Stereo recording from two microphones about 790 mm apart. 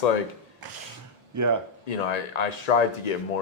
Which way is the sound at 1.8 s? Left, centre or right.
Left.